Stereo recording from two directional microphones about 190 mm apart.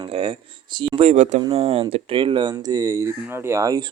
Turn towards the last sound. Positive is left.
turn(degrees=-15)  # may be behind; listen again after turning